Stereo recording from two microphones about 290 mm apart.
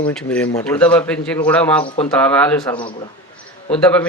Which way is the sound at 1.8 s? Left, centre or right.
Centre.